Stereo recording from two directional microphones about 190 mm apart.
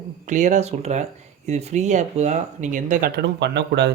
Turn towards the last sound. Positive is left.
turn(degrees=-60)  # may be behind; listen again after turning